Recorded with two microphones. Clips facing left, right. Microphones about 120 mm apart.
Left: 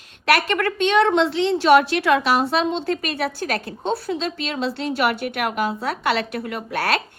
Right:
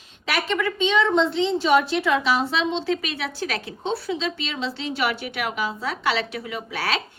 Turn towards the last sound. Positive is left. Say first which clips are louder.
# left 4 dB
turn(degrees=55)  # may be behind; listen again after turning